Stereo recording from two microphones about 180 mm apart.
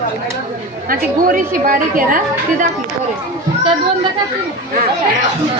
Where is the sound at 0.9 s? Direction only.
50° right (ahead or behind).